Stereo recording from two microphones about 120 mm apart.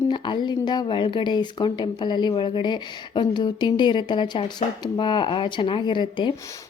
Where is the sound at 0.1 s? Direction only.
40° left (ahead or behind).